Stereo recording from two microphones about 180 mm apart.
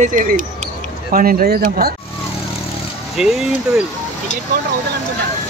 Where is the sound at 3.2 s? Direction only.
5° right (ahead or behind).